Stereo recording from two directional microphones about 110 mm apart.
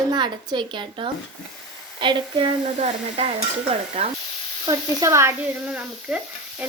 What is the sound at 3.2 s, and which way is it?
Stir, 60° right (ahead or behind).